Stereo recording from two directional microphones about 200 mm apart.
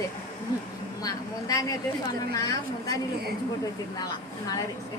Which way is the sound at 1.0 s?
20° left (ahead or behind).